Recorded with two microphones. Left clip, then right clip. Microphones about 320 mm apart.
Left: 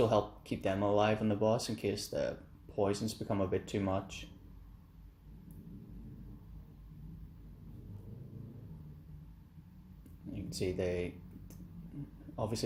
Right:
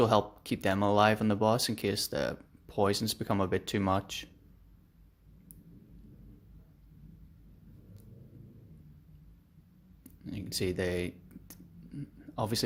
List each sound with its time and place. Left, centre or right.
0.0 s speech: right
10.3 s speech: right